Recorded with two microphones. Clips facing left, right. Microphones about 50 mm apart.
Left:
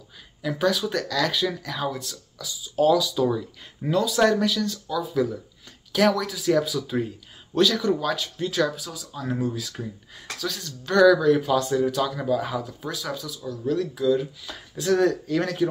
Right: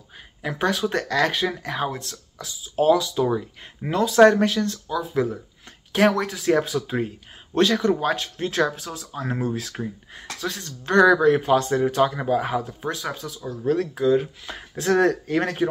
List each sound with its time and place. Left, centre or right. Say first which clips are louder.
0.4 s speech: even; right